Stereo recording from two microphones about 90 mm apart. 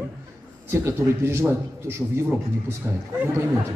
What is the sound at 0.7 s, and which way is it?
A man's voice, 25° right (ahead or behind).